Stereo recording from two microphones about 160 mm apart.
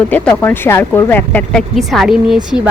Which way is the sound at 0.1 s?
10° left (ahead or behind).